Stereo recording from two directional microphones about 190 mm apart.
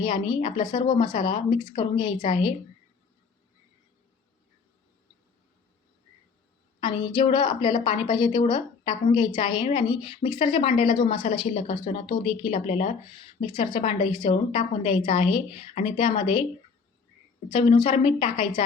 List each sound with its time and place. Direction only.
0.0 s a woman's voice: 25° left (ahead or behind)
6.7 s a woman's voice: 25° left (ahead or behind)
13.4 s a woman's voice: 25° left (ahead or behind)
17.5 s a woman's voice: 30° left (ahead or behind)